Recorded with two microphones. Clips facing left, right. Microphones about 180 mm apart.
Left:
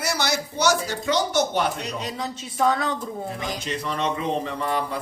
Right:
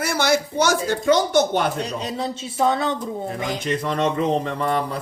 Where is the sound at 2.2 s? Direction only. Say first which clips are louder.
Right 3 dB; 25° right (ahead or behind).